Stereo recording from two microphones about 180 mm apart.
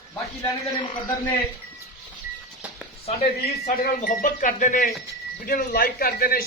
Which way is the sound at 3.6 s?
45° left (ahead or behind).